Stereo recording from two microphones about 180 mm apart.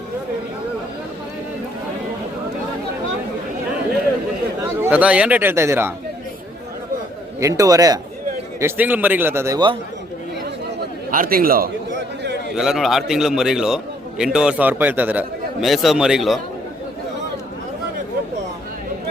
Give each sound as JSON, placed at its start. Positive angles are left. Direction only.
{"t": 4.8, "sound": "a man's voice", "side_deg": -5}
{"t": 7.3, "sound": "a man's voice", "side_deg": -20}
{"t": 8.6, "sound": "a man's voice", "side_deg": -10}
{"t": 11.1, "sound": "a man's voice", "side_deg": -50}
{"t": 11.9, "sound": "a sound", "side_deg": -70}
{"t": 12.5, "sound": "a man's voice", "side_deg": 0}